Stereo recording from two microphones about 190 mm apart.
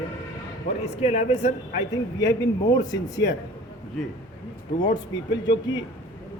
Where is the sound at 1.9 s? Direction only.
20° left (ahead or behind).